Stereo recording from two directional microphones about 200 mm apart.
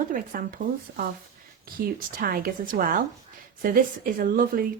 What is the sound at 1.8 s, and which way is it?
A woman's voice, 50° right (ahead or behind).